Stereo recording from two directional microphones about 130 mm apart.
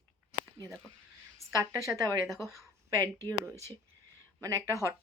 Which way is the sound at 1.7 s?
25° right (ahead or behind).